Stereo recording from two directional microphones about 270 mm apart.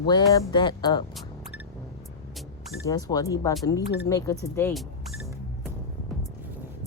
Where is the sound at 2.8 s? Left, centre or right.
Centre.